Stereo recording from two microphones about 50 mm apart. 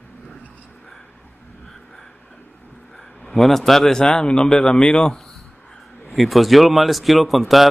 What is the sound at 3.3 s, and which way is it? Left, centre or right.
Speech, centre.